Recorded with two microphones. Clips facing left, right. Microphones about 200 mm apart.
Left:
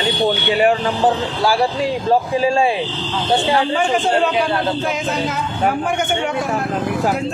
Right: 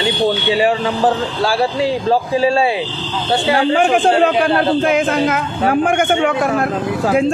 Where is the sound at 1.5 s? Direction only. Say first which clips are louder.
Right 2 dB; 30° right (ahead or behind).